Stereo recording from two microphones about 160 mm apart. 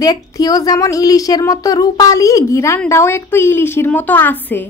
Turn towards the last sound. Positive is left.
turn(degrees=10)  # may be behind; listen again after turning